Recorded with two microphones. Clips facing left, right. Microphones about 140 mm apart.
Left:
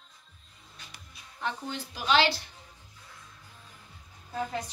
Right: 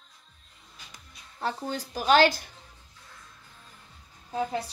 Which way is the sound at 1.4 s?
40° right (ahead or behind).